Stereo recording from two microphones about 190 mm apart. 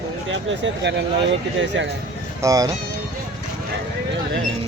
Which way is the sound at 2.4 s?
20° right (ahead or behind).